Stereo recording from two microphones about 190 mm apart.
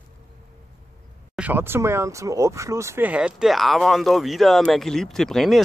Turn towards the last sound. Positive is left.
turn(degrees=0)  # may be behind; listen again after turning